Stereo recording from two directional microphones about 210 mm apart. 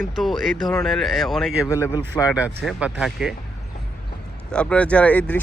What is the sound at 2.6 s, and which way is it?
Speech, 5° right (ahead or behind).